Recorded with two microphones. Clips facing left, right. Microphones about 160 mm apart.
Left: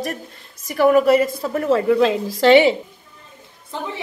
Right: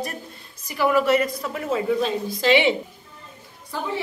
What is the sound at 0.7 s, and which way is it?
Speech, 45° left (ahead or behind).